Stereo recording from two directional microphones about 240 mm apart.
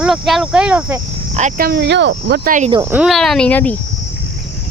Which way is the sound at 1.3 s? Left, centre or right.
Right.